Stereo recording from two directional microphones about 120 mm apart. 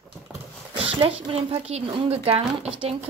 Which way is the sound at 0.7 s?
50° right (ahead or behind).